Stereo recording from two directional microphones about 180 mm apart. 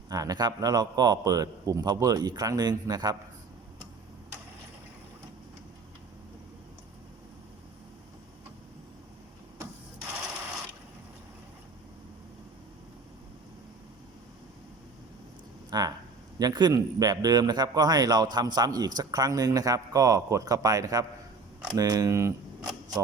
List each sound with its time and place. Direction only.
0.1 s a man's voice: 20° right (ahead or behind)
15.7 s a sound: 20° right (ahead or behind)
16.4 s a man's voice: 25° right (ahead or behind)